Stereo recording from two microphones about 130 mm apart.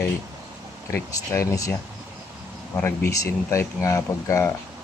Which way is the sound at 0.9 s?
25° left (ahead or behind).